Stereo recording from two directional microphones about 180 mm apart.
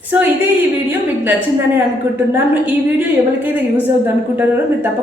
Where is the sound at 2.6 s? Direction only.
10° right (ahead or behind).